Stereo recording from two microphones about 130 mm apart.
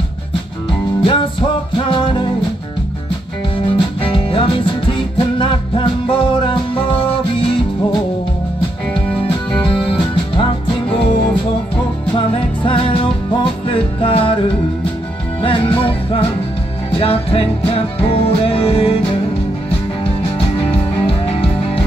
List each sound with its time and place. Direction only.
1.0 s music: 40° left (ahead or behind)
3.7 s music: 40° left (ahead or behind)
9.8 s music: 40° left (ahead or behind)
12.6 s music: 45° left (ahead or behind)
15.4 s music: 45° left (ahead or behind)
21.1 s music: 45° left (ahead or behind)